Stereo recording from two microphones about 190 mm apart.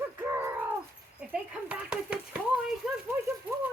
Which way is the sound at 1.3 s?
5° right (ahead or behind).